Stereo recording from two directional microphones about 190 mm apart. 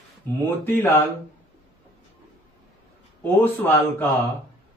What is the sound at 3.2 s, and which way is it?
Speech, 10° left (ahead or behind).